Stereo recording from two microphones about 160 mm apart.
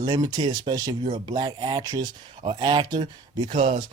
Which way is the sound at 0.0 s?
25° right (ahead or behind).